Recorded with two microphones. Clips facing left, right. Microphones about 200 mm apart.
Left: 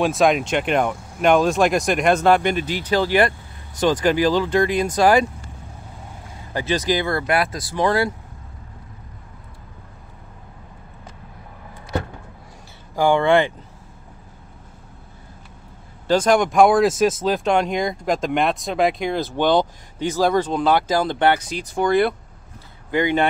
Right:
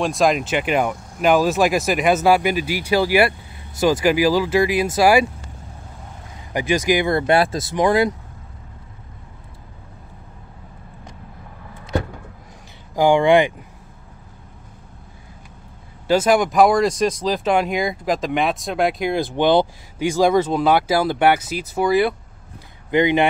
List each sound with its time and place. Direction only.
0.0 s speech: centre (ahead or behind)
6.5 s speech: 15° right (ahead or behind)
12.9 s speech: 15° right (ahead or behind)
16.1 s speech: 5° right (ahead or behind)
22.8 s speech: 20° right (ahead or behind)